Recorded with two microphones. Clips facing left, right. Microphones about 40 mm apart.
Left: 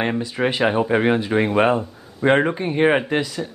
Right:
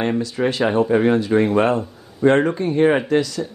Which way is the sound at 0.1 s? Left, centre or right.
Left.